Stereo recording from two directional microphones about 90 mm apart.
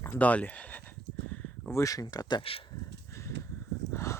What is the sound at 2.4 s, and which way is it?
Speech, 90° left.